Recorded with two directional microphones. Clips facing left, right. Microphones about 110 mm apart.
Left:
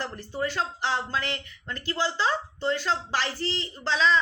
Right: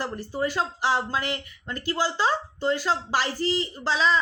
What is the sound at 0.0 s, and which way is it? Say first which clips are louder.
Speech: right 3 dB; 15° right (ahead or behind).